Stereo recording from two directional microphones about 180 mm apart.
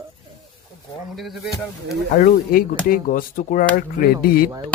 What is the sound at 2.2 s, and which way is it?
Speech, 55° left (ahead or behind).